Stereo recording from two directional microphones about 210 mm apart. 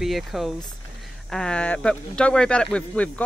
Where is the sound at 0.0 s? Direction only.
Centre (ahead or behind).